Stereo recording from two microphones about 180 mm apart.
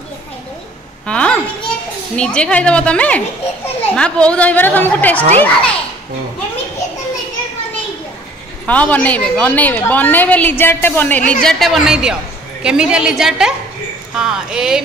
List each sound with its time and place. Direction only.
1.0 s a woman's voice: 5° left (ahead or behind)
8.6 s a woman's voice: 10° left (ahead or behind)